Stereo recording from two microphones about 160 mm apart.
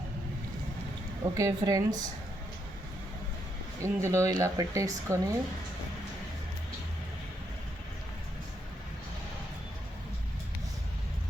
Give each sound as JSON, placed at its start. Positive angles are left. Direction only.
{"t": 1.2, "sound": "speech", "side_deg": -20}
{"t": 3.8, "sound": "speech", "side_deg": -20}